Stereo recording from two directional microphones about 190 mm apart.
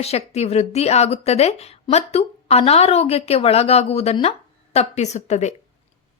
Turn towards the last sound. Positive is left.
turn(degrees=35)  # may be behind; listen again after turning